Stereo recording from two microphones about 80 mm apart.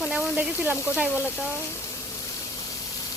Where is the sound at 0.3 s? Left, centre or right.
Right.